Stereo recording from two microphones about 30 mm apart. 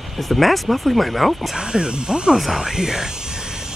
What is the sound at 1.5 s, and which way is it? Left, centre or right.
Speech, right.